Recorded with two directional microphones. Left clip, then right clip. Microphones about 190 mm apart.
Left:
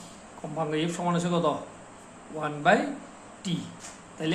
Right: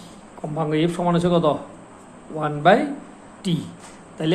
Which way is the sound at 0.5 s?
30° right (ahead or behind).